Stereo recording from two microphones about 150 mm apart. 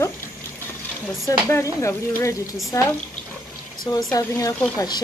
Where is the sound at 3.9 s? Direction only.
25° left (ahead or behind).